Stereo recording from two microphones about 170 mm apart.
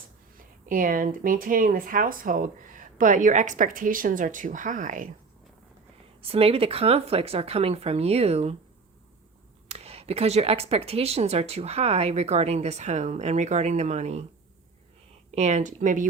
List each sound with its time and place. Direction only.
0.6 s speech: 55° right (ahead or behind)
6.2 s speech: 35° right (ahead or behind)
9.6 s speech: 35° right (ahead or behind)
15.3 s speech: 40° right (ahead or behind)